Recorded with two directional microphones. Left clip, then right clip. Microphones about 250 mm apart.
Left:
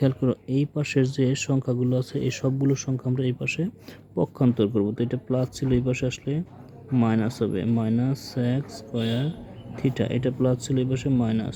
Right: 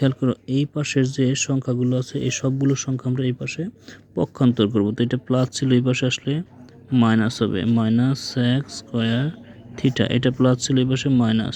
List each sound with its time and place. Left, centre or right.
0.0 s speech: centre